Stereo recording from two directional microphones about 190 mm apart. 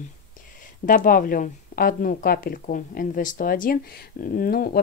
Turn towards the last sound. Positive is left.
turn(degrees=50)  # may be behind; listen again after turning